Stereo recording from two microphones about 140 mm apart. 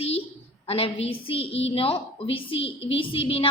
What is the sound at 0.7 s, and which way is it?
A woman's voice, 45° left (ahead or behind).